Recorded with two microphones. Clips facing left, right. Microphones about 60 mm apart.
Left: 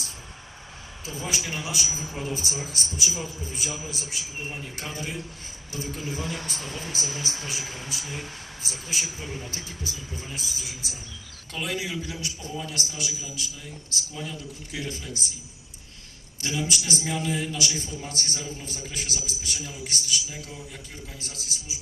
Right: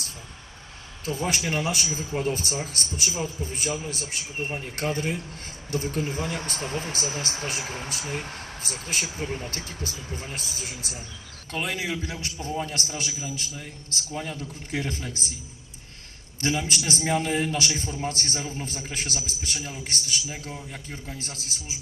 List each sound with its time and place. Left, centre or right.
1.0 s speech: right
1.9 s speech: centre
2.1 s a man's voice: right
6.9 s speech: right
16.4 s speech: right
17.7 s a man's voice: right